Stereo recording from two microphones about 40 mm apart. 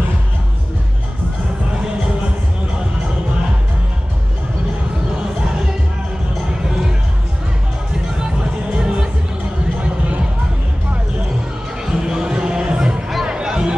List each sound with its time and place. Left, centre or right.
8.7 s music: right
11.8 s a sound: centre
13.2 s music: centre